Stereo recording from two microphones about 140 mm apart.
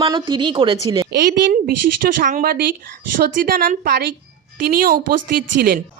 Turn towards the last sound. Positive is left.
turn(degrees=-90)